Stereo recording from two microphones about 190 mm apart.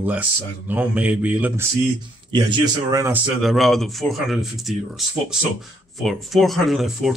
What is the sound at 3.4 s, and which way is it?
Speech, centre (ahead or behind).